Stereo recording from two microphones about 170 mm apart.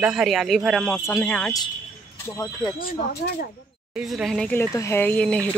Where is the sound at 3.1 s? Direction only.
70° left (ahead or behind).